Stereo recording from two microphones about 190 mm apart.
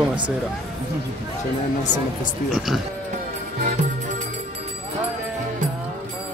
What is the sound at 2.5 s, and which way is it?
Speech, centre (ahead or behind).